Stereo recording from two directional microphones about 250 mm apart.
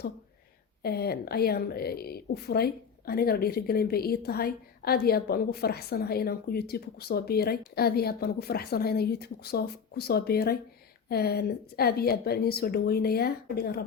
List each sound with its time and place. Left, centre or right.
0.8 s a woman's voice: left